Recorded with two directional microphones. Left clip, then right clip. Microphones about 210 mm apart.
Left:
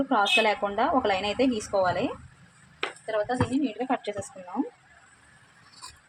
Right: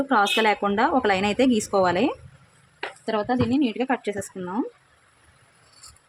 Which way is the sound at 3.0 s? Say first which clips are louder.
Right 4 dB; 50° right (ahead or behind).